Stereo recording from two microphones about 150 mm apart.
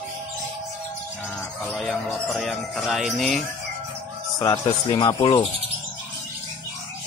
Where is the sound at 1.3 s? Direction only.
5° left (ahead or behind).